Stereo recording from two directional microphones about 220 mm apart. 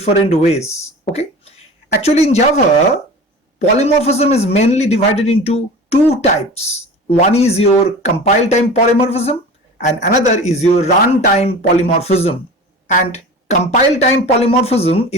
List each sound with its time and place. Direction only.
0.0 s a man's voice: 30° left (ahead or behind)
3.6 s a man's voice: 30° left (ahead or behind)